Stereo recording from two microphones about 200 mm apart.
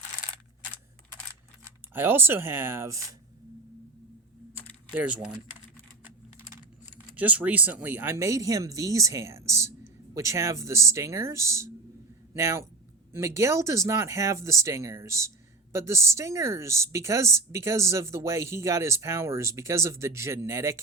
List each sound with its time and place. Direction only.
1.6 s speech: 10° right (ahead or behind)
4.9 s speech: 5° right (ahead or behind)
7.2 s speech: 5° right (ahead or behind)